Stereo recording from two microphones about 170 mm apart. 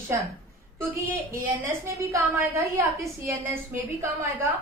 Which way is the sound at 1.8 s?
15° right (ahead or behind).